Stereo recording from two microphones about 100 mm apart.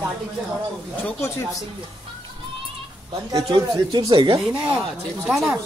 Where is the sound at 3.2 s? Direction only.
40° right (ahead or behind).